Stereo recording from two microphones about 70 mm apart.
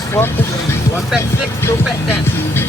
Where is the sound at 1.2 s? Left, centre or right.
Left.